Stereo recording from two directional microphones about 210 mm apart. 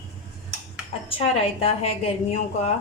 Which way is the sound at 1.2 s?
30° left (ahead or behind).